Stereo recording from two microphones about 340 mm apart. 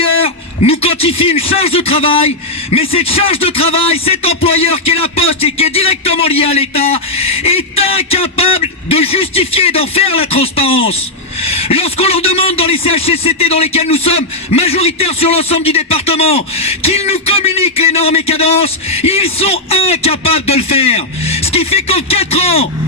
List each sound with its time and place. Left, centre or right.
0.6 s a man's voice: centre